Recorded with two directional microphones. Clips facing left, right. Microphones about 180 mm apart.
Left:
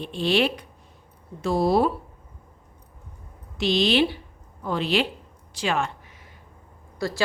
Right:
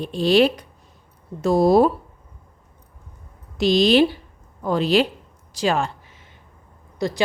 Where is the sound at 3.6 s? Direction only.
40° right (ahead or behind).